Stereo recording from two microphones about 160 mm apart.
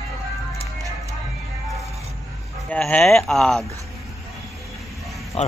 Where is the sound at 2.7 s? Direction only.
5° left (ahead or behind).